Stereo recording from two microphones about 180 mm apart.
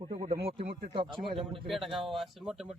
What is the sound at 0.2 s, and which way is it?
Speech, 35° right (ahead or behind).